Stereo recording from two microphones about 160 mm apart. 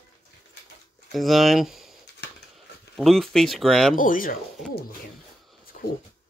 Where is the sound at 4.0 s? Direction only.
60° left (ahead or behind).